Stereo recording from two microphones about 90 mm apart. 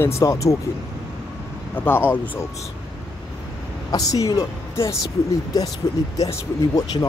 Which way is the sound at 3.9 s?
40° left (ahead or behind).